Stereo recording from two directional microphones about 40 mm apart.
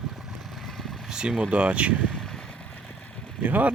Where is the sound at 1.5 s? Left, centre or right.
Right.